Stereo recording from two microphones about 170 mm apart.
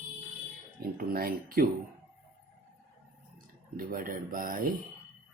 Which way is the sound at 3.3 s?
55° right (ahead or behind).